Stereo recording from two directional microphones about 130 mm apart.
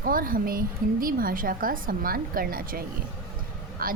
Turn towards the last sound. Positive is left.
turn(degrees=-90)